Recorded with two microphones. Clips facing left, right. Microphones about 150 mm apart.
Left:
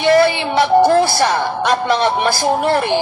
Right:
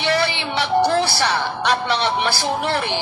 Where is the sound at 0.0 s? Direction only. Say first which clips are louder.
Left 8 dB; 45° left (ahead or behind).